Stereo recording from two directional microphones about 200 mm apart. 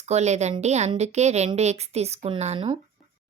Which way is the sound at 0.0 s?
35° right (ahead or behind).